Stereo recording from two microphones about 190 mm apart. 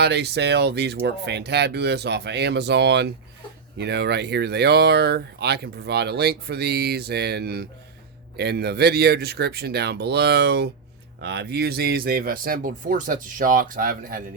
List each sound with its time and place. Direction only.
0.0 s speech: 60° right (ahead or behind)